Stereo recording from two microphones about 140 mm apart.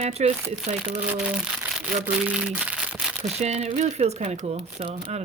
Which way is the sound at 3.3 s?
50° right (ahead or behind).